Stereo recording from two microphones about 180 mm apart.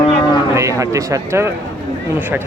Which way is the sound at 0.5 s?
15° right (ahead or behind).